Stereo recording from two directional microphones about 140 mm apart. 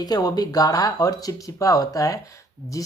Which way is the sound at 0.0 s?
30° left (ahead or behind).